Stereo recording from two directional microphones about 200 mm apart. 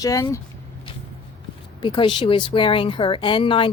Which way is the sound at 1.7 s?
20° left (ahead or behind).